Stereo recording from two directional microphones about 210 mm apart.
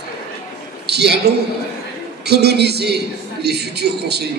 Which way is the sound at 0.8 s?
50° right (ahead or behind).